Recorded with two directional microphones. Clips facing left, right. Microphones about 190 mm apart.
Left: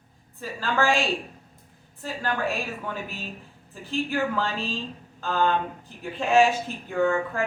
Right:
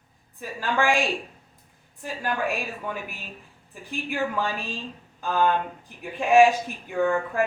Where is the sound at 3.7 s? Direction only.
15° right (ahead or behind).